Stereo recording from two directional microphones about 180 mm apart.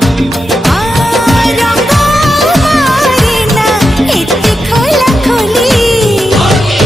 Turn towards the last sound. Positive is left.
turn(degrees=0)  # may be behind; listen again after turning